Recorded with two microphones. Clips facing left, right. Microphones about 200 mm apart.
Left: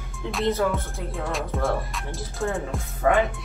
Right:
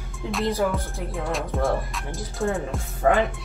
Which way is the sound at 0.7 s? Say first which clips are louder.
Right 1 dB; centre (ahead or behind).